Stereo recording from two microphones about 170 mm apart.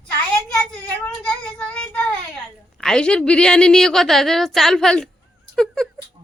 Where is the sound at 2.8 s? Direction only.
5° left (ahead or behind).